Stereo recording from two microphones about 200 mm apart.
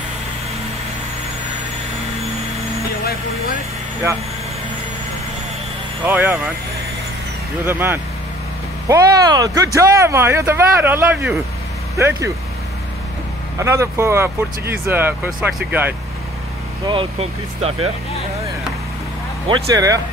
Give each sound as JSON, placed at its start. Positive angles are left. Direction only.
{"t": 6.0, "sound": "speech", "side_deg": -10}
{"t": 7.6, "sound": "speech", "side_deg": -10}
{"t": 13.6, "sound": "speech", "side_deg": -15}
{"t": 16.8, "sound": "speech", "side_deg": -25}
{"t": 19.4, "sound": "speech", "side_deg": -20}